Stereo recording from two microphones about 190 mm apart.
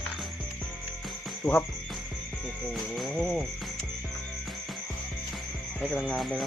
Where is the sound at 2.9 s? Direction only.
Centre (ahead or behind).